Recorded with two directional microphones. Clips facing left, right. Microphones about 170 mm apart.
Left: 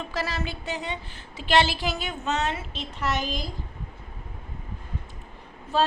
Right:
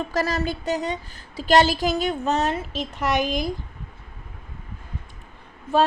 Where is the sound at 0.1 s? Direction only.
40° right (ahead or behind).